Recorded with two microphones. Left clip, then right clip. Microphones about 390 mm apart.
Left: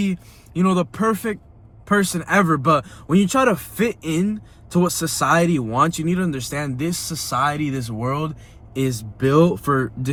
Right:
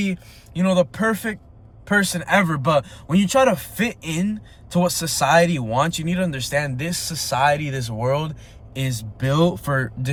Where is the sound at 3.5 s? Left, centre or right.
Right.